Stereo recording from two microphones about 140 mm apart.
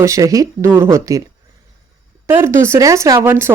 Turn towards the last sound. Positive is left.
turn(degrees=-15)  # may be behind; listen again after turning